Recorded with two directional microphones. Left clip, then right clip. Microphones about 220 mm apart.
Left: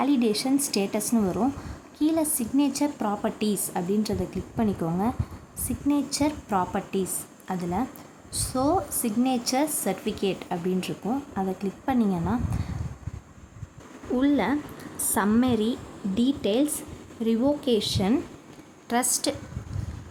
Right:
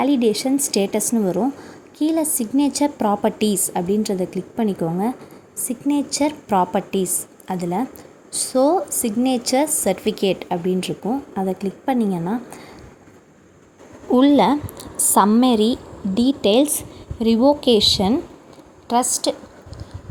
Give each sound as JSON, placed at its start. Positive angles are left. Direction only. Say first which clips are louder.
{"t": 0.0, "sound": "a woman's voice", "louder": "right 6 dB", "side_deg": -15}
{"t": 14.1, "sound": "a woman's voice", "louder": "right 10 dB", "side_deg": -25}